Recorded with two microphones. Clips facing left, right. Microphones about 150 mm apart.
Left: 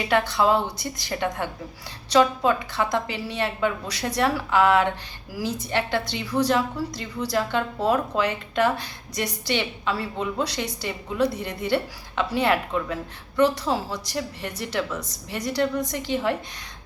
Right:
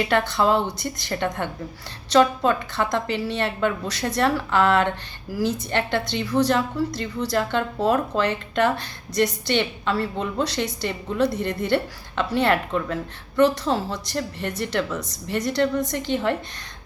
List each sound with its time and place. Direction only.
0.0 s a woman's voice: 5° left (ahead or behind)
15.9 s a woman's voice: 5° left (ahead or behind)